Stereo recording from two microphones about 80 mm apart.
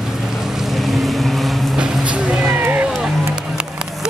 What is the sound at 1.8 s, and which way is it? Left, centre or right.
Speech, centre.